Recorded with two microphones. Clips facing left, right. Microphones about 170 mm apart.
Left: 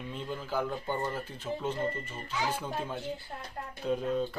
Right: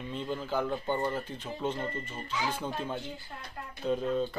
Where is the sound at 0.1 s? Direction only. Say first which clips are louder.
Right 4 dB; 10° left (ahead or behind).